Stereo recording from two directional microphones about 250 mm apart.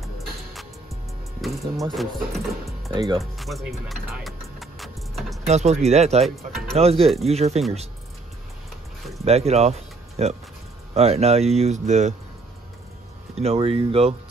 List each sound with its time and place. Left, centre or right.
1.4 s speech: centre
2.9 s speech: centre
3.2 s music: centre
5.5 s speech: right
6.2 s speech: centre
6.7 s speech: right
9.2 s speech: right
13.3 s speech: right